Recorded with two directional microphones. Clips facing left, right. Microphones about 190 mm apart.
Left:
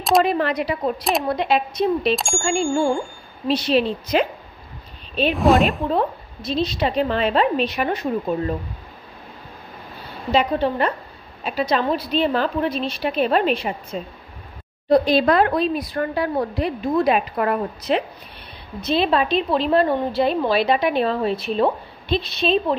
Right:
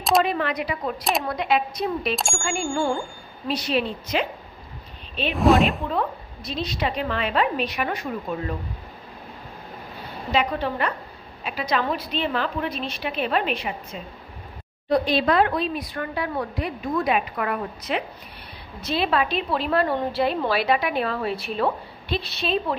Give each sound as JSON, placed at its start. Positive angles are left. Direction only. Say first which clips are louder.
{"t": 0.2, "sound": "a woman's voice", "louder": "left 4 dB", "side_deg": 35}
{"t": 5.3, "sound": "speech", "louder": "left 1 dB", "side_deg": 0}
{"t": 5.9, "sound": "a woman's voice", "louder": "left 5 dB", "side_deg": 30}
{"t": 10.3, "sound": "a woman's voice", "louder": "left 5 dB", "side_deg": 30}
{"t": 14.9, "sound": "a woman's voice", "louder": "left 5 dB", "side_deg": 40}
{"t": 18.8, "sound": "a woman's voice", "louder": "left 4 dB", "side_deg": 20}